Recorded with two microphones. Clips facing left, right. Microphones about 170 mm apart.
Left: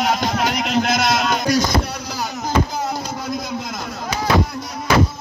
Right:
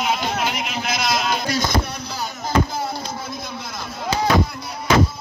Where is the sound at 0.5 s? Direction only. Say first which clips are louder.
Left 7 dB; 70° left (ahead or behind); by 1.5 s 50° left (ahead or behind).